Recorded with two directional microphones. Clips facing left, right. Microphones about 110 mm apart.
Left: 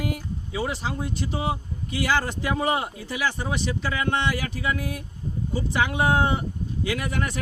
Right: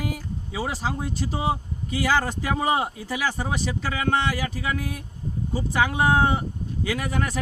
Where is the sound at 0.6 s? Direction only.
40° right (ahead or behind).